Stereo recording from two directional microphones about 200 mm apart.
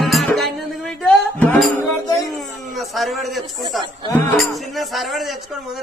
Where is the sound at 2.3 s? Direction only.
Centre (ahead or behind).